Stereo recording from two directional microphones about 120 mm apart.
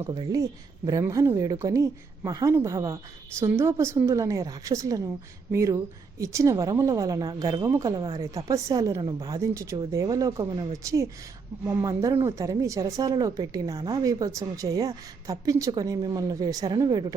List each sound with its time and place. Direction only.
0.1 s speech: 35° right (ahead or behind)